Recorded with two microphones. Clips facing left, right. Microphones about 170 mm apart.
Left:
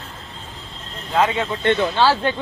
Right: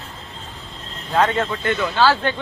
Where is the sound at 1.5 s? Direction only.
30° left (ahead or behind).